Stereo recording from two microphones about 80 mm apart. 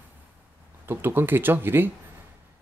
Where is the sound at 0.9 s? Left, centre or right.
Right.